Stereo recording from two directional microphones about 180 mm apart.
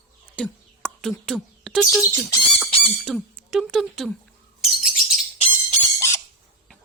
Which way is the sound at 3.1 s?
Centre (ahead or behind).